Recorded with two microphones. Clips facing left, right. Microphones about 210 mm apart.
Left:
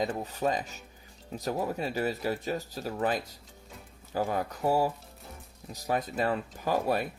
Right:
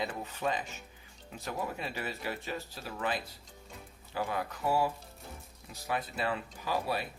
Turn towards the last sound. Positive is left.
turn(degrees=50)  # may be behind; listen again after turning